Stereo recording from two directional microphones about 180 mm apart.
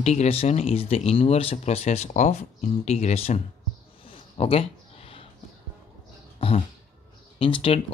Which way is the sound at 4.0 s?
30° left (ahead or behind).